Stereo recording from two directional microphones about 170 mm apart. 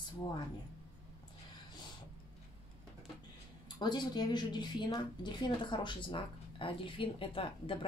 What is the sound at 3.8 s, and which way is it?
A woman's voice, 25° left (ahead or behind).